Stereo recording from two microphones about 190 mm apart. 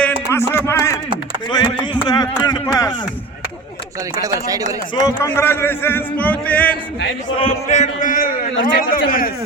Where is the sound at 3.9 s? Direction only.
15° right (ahead or behind).